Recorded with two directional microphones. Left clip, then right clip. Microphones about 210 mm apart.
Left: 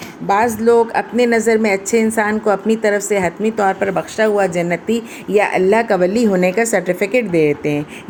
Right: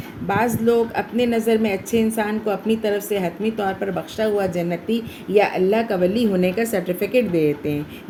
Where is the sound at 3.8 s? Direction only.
15° left (ahead or behind).